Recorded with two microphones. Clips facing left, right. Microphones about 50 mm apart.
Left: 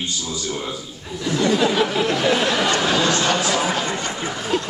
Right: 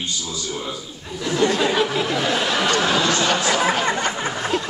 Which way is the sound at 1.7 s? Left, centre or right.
Centre.